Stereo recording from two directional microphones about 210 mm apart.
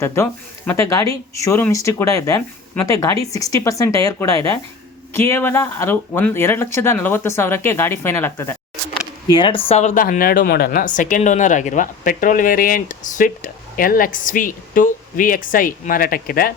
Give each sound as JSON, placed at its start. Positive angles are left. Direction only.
{"t": 0.0, "sound": "speech", "side_deg": 10}
{"t": 9.3, "sound": "a woman's voice", "side_deg": 25}